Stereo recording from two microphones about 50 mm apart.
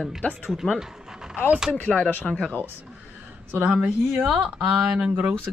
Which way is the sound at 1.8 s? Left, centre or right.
Left.